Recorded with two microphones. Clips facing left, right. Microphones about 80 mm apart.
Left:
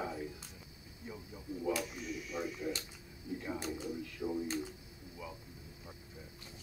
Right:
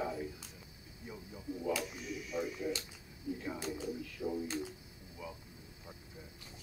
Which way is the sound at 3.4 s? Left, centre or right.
Centre.